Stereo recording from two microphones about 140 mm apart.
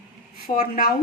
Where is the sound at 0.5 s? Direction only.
85° left.